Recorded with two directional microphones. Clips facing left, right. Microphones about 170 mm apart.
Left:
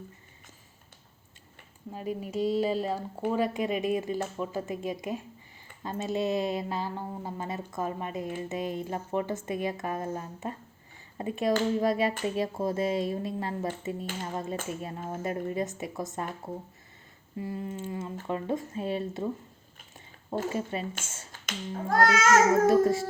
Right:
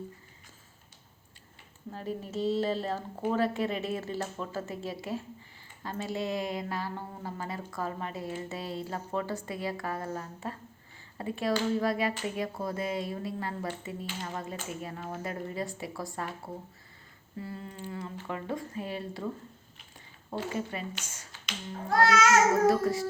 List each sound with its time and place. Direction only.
1.9 s a woman's voice: 10° left (ahead or behind)
17.3 s speech: 15° left (ahead or behind)
20.5 s speech: 25° left (ahead or behind)
21.4 s a child's voice: 45° left (ahead or behind)
22.6 s speech: 25° left (ahead or behind)